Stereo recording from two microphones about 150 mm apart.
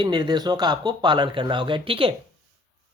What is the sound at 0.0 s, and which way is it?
Speech, 30° right (ahead or behind).